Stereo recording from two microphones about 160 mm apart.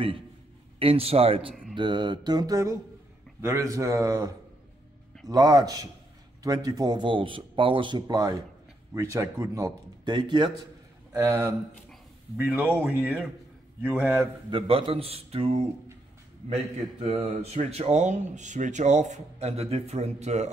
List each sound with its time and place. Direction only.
0.7 s a man's voice: 35° right (ahead or behind)
1.5 s a sound: centre (ahead or behind)
1.8 s speech: 30° right (ahead or behind)
5.3 s speech: 25° right (ahead or behind)
12.5 s speech: 10° right (ahead or behind)
14.5 s a man's voice: 35° right (ahead or behind)
17.0 s speech: 40° right (ahead or behind)